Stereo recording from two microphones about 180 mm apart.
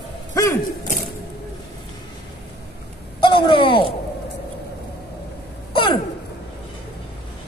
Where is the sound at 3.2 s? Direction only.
30° left (ahead or behind).